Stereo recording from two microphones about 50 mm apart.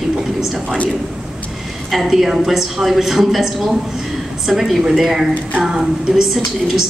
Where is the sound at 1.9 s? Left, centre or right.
Centre.